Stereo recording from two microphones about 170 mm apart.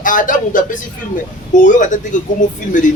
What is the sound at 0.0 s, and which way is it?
A man's voice, 50° left (ahead or behind).